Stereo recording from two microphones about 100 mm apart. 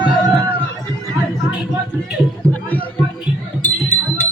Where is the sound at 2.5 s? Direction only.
15° left (ahead or behind).